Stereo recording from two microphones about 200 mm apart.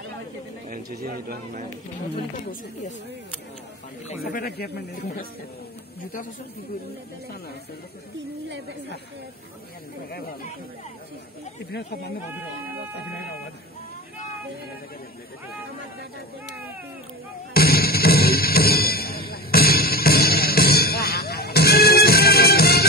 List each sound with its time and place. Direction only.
0.7 s a man's voice: 50° right (ahead or behind)
4.2 s speech: 50° left (ahead or behind)
10.1 s speech: 50° left (ahead or behind)
17.6 s music: 50° left (ahead or behind)